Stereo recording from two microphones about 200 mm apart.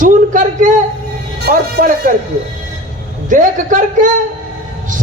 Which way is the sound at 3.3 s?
40° right (ahead or behind).